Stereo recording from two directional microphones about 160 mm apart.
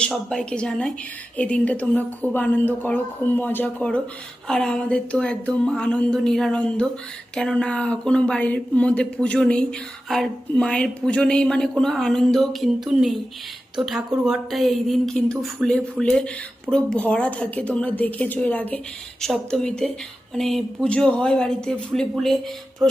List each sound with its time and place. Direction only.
0.0 s a woman's voice: 5° left (ahead or behind)